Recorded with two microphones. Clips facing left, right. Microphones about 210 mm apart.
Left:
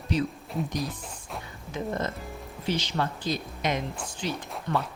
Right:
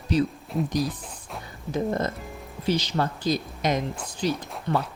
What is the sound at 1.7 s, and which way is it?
Speech, 40° right (ahead or behind).